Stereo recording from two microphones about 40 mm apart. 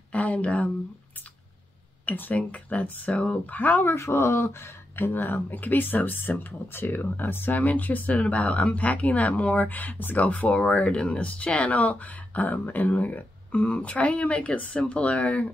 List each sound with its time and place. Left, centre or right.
0.1 s speech: left
2.0 s speech: left
2.3 s speech: left
3.4 s speech: left
3.9 s speech: left
10.9 s speech: left